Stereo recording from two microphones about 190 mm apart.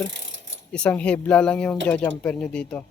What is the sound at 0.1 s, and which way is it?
Mechanisms, 75° right (ahead or behind).